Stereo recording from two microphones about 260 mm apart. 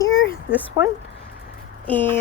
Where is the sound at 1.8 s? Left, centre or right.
Centre.